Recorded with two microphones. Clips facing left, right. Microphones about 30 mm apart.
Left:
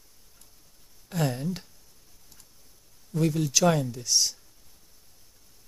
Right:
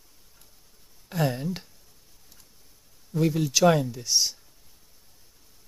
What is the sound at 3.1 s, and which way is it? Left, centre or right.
Speech, centre.